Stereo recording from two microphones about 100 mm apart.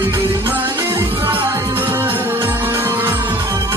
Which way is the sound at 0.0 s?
25° right (ahead or behind).